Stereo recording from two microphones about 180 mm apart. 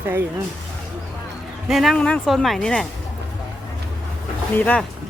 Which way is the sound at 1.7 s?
Centre (ahead or behind).